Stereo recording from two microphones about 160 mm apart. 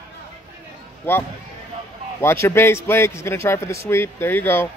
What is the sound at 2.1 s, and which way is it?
A man's voice, 15° left (ahead or behind).